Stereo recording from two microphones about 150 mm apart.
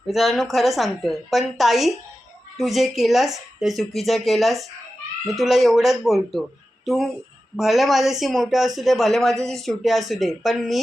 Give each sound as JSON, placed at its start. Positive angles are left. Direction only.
{"t": 0.1, "sound": "a woman's voice", "side_deg": 0}